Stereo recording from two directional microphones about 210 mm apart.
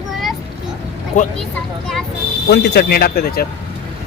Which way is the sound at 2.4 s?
55° left (ahead or behind).